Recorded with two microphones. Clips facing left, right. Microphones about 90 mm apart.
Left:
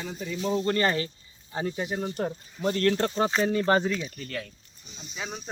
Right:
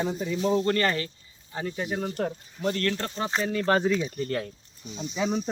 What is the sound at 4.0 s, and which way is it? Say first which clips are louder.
Speech: right 6 dB; 25° right (ahead or behind).